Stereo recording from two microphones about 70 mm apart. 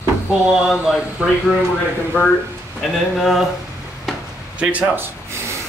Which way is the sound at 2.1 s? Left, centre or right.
Left.